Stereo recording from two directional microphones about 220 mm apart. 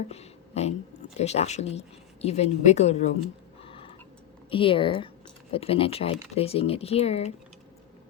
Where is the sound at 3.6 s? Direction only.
25° left (ahead or behind).